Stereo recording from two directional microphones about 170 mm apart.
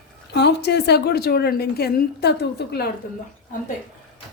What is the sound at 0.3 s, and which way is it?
A woman's voice, 80° left.